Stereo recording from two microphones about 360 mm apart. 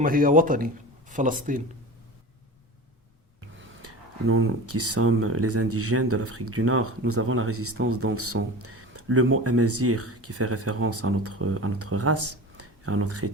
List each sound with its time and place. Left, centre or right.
0.0 s a man's voice: right
3.6 s speech: right